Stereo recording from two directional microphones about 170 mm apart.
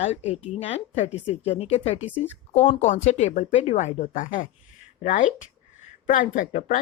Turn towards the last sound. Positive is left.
turn(degrees=50)  # may be behind; listen again after turning